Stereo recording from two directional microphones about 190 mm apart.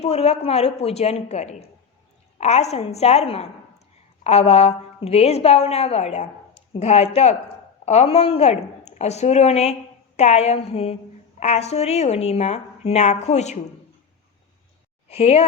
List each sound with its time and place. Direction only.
0.0 s a woman's voice: 35° left (ahead or behind)
15.1 s a woman's voice: 35° left (ahead or behind)